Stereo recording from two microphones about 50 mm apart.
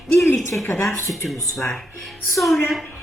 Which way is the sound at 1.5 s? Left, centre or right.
Centre.